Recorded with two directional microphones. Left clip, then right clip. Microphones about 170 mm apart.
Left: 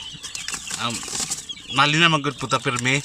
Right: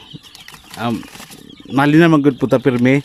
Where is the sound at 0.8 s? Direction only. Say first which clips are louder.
Right 5 dB; 40° right (ahead or behind).